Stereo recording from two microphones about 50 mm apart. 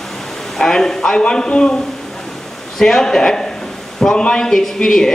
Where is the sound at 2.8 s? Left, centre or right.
Centre.